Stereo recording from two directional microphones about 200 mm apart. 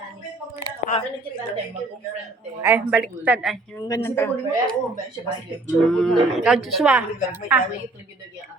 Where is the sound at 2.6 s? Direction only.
10° right (ahead or behind).